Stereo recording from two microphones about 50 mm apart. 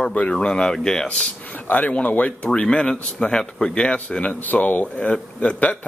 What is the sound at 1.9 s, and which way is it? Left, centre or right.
Speech, left.